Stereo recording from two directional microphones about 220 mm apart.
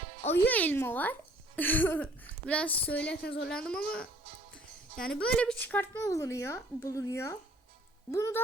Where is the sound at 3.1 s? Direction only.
50° left (ahead or behind).